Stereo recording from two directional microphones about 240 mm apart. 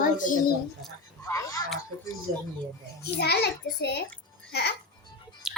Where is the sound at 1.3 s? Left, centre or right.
Centre.